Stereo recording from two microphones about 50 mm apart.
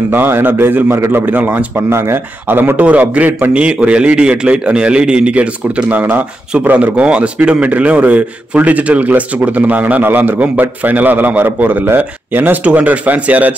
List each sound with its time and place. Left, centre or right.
0.1 s a man's voice: right
1.1 s a man's voice: right
1.9 s speech: right
2.4 s a man's voice: right
3.3 s a man's voice: right
3.5 s a man's voice: right
5.9 s a man's voice: right